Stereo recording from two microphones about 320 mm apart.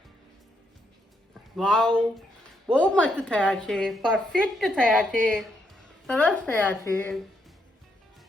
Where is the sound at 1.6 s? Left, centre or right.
Centre.